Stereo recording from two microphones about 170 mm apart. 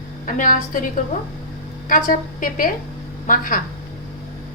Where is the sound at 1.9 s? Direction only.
50° left (ahead or behind).